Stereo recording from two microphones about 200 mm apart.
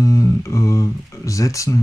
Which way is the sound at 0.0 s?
15° left (ahead or behind).